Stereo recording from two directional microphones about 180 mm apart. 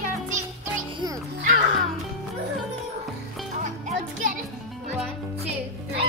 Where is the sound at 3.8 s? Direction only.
50° right (ahead or behind).